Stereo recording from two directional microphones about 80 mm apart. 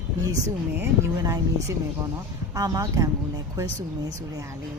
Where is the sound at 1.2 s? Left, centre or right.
Right.